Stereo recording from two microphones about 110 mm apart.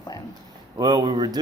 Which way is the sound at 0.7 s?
40° right (ahead or behind).